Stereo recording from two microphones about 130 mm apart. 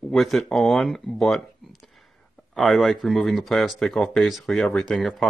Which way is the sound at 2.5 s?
Centre (ahead or behind).